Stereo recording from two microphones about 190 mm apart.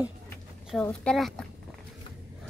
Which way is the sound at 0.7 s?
5° left (ahead or behind).